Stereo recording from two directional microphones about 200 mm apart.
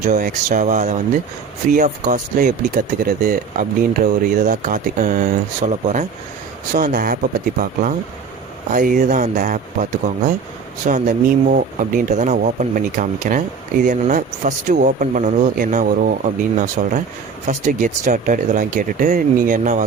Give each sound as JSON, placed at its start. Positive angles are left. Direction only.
{"t": 0.2, "sound": "speech", "side_deg": -40}
{"t": 10.8, "sound": "speech", "side_deg": -40}